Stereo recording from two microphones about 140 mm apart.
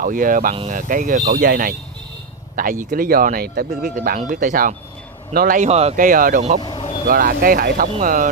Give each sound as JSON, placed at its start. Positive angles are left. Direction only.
{"t": 0.0, "sound": "speech", "side_deg": -80}
{"t": 0.7, "sound": "speech", "side_deg": -70}
{"t": 4.3, "sound": "speech", "side_deg": -70}
{"t": 5.3, "sound": "speech", "side_deg": -85}
{"t": 5.7, "sound": "speech", "side_deg": -50}
{"t": 5.9, "sound": "speech", "side_deg": -75}
{"t": 6.6, "sound": "vehicle", "side_deg": 35}
{"t": 7.1, "sound": "speech", "side_deg": -90}
{"t": 8.0, "sound": "speech", "side_deg": -80}